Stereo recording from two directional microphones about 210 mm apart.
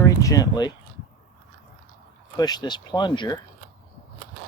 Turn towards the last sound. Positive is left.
turn(degrees=20)  # may be behind; listen again after turning